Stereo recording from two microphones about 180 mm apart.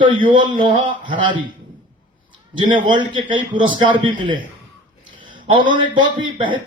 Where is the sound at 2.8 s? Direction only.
25° right (ahead or behind).